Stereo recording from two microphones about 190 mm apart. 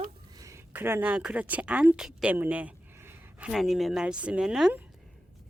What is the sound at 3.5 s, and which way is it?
Speech, centre (ahead or behind).